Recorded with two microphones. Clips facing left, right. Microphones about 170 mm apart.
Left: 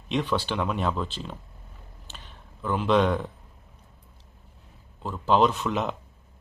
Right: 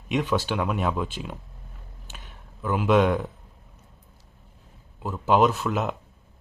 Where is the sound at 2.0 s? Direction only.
10° right (ahead or behind).